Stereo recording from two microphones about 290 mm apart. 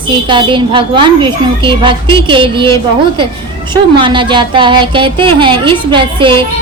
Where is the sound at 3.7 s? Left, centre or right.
Centre.